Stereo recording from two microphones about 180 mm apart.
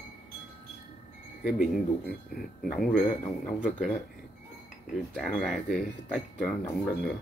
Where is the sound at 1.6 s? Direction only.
Centre (ahead or behind).